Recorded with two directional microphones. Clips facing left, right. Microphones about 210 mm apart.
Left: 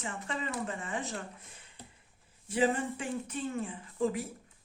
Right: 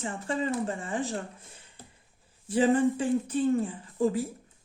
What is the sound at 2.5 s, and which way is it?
Speech, 30° right (ahead or behind).